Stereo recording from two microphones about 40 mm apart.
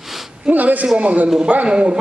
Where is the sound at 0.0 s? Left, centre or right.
Centre.